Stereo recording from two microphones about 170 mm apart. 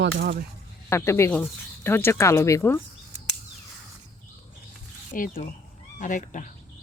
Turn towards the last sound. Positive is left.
turn(degrees=50)  # may be behind; listen again after turning